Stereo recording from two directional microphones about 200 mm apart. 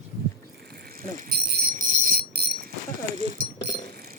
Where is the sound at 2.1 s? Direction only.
55° right (ahead or behind).